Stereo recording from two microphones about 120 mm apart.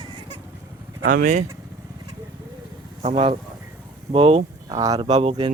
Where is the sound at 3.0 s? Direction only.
55° right (ahead or behind).